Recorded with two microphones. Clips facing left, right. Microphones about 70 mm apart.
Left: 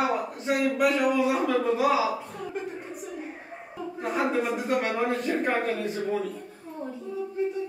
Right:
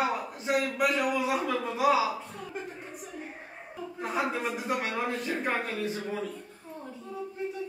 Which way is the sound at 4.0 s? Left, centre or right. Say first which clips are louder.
Left 4 dB; centre.